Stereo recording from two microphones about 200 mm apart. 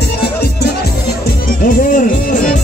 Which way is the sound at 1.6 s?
40° left (ahead or behind).